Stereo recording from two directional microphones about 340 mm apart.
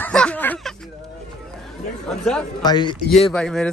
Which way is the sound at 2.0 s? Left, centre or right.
Centre.